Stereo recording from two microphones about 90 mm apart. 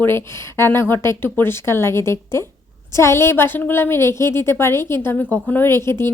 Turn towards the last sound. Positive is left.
turn(degrees=30)  # may be behind; listen again after turning